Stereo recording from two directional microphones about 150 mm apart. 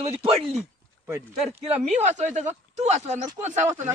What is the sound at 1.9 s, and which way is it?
Speech, 50° right (ahead or behind).